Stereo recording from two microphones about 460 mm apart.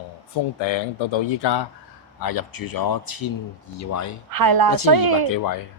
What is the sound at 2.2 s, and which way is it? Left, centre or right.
Speech, left.